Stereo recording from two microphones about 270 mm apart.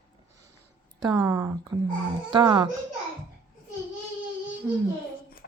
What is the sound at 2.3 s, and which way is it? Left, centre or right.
Speech, centre.